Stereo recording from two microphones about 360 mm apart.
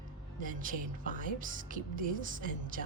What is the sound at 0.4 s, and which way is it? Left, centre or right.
A woman's voice, right.